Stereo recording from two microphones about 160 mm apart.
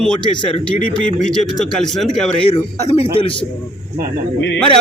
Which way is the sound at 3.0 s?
35° left (ahead or behind).